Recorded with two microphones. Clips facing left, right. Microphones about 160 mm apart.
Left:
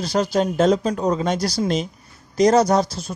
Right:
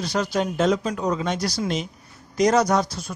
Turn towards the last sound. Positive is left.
turn(degrees=30)  # may be behind; listen again after turning